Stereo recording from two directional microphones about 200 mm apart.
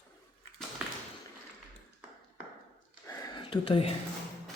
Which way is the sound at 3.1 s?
20° left (ahead or behind).